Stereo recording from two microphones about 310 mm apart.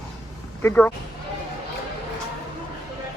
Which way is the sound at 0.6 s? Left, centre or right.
Centre.